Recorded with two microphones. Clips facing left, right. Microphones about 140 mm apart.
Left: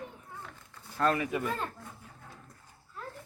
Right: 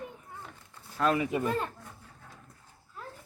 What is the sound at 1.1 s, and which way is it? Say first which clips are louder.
Speech: right 3 dB; 25° right (ahead or behind).